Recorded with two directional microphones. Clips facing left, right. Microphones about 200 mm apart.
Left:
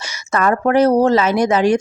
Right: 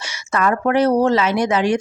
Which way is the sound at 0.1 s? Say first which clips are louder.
Left 2 dB; 40° left (ahead or behind).